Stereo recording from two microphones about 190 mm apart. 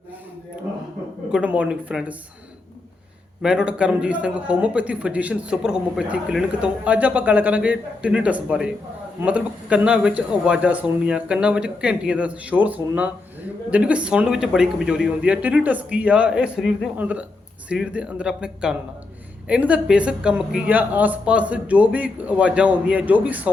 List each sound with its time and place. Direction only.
1.3 s speech: 5° right (ahead or behind)
3.4 s a man's voice: 5° right (ahead or behind)